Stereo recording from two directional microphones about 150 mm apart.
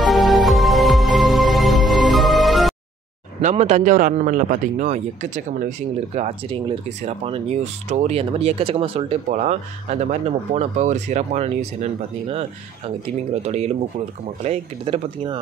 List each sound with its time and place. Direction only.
0.0 s music: centre (ahead or behind)
3.3 s a man's voice: 50° right (ahead or behind)
9.3 s a man's voice: 50° right (ahead or behind)